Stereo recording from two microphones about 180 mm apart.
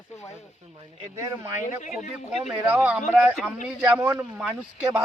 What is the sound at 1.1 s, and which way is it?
Speech, 15° right (ahead or behind).